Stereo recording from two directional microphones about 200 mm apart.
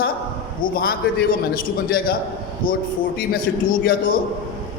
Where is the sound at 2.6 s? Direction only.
45° left (ahead or behind).